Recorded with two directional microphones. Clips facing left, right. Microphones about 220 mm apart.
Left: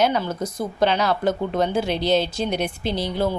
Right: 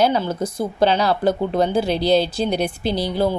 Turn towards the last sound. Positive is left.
turn(degrees=-35)  # may be behind; listen again after turning